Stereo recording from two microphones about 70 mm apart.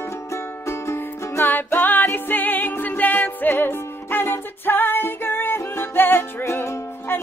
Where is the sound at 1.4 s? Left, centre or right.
Left.